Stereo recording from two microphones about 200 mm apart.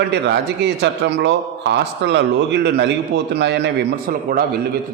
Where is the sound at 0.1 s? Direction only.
60° right (ahead or behind).